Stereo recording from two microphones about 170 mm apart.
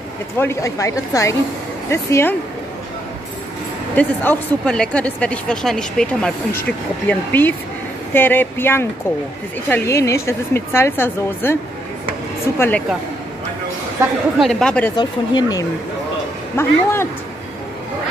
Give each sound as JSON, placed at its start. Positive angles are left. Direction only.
{"t": 0.4, "sound": "speech", "side_deg": 15}
{"t": 3.9, "sound": "speech", "side_deg": 10}
{"t": 12.5, "sound": "speech", "side_deg": 15}
{"t": 14.4, "sound": "speech", "side_deg": 5}
{"t": 15.0, "sound": "speech", "side_deg": 25}
{"t": 16.5, "sound": "speech", "side_deg": 15}